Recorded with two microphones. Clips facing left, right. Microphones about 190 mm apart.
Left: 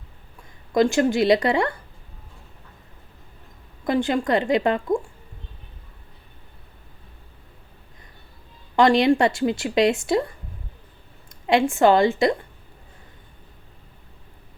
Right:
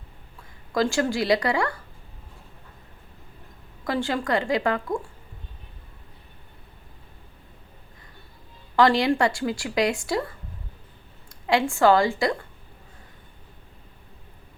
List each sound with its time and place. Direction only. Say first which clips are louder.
0.7 s speech: left 5 dB; 20° left (ahead or behind)
3.8 s speech: left 4 dB; 20° left (ahead or behind)
8.7 s a woman's voice: left 3 dB; 20° left (ahead or behind)